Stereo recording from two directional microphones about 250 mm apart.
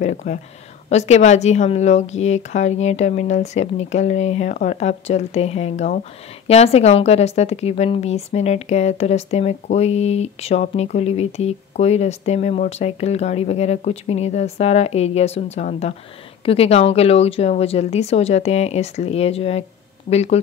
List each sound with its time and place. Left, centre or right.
0.0 s a woman's voice: left